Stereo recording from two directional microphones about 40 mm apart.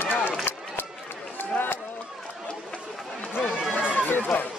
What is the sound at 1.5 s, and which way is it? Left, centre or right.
Run, left.